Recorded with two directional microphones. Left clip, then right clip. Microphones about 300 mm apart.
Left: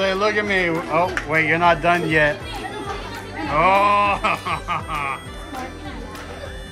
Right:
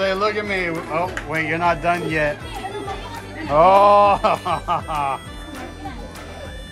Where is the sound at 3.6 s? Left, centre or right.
Centre.